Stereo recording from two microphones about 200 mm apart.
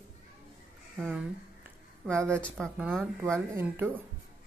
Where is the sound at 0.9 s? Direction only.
Centre (ahead or behind).